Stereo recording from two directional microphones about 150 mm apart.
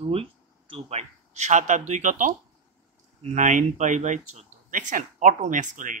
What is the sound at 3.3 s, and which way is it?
Speech, 55° right (ahead or behind).